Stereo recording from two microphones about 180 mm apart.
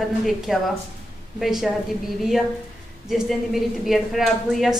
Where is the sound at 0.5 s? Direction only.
5° right (ahead or behind).